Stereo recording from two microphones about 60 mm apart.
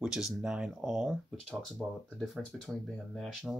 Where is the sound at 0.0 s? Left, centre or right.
Centre.